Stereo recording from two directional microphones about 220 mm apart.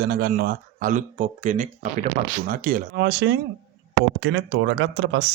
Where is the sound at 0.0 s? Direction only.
45° right (ahead or behind).